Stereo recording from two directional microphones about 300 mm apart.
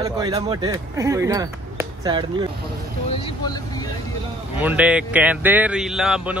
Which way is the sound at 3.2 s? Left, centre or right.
Centre.